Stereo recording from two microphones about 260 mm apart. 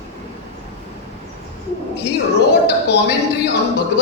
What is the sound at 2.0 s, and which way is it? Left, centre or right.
Music, left.